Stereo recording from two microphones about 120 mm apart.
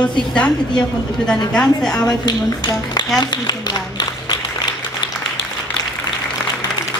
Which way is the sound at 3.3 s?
35° left (ahead or behind).